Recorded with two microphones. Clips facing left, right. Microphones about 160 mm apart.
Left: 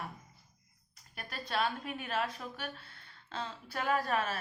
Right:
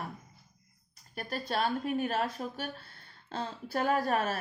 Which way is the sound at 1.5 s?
40° right (ahead or behind).